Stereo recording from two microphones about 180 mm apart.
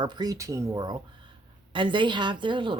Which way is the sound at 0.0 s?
25° right (ahead or behind).